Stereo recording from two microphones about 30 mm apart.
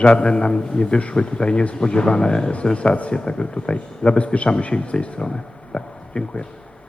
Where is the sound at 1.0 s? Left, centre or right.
Left.